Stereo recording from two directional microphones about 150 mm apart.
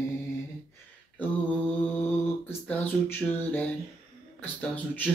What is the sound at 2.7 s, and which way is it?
Speech, 15° left (ahead or behind).